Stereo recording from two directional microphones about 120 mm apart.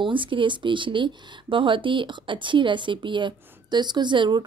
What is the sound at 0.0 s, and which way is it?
Speech, 45° right (ahead or behind).